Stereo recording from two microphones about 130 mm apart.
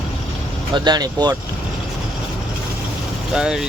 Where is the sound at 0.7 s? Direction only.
30° right (ahead or behind).